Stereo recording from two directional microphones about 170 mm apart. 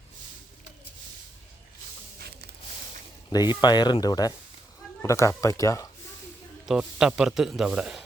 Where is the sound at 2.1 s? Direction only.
70° right (ahead or behind).